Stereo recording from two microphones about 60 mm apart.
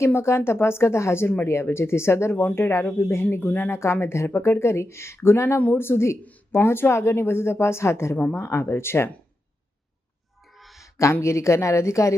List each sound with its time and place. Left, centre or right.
0.0 s speech: left
2.3 s speech: left
2.6 s speech: left
3.3 s speech: left
4.0 s speech: left
10.5 s a sound: centre
10.8 s speech: left